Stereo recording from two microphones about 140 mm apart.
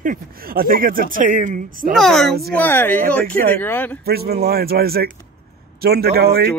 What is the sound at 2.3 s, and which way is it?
Speech, 90° right.